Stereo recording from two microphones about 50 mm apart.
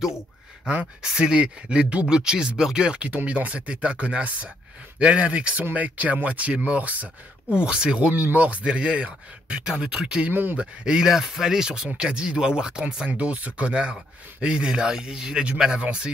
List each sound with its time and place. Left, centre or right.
1.0 s speech: centre; by 7.1 s right
7.4 s speech: centre
8.1 s speech: right; by 11.1 s centre
11.1 s speech: centre; by 16.1 s right